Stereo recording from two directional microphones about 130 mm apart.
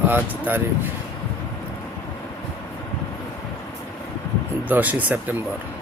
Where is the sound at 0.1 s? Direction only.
15° right (ahead or behind).